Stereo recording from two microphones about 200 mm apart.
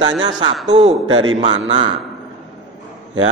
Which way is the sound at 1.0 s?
90° right.